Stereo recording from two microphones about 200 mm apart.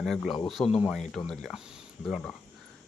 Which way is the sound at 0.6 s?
30° left (ahead or behind).